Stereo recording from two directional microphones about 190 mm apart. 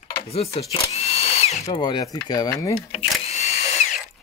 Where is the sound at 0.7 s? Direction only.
35° left (ahead or behind).